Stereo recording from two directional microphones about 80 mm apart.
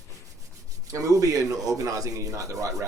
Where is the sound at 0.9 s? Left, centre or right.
Right.